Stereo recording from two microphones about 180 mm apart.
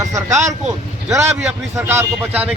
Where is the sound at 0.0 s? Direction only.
15° right (ahead or behind).